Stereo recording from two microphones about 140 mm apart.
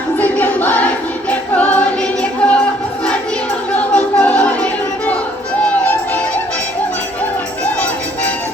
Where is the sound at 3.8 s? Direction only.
10° left (ahead or behind).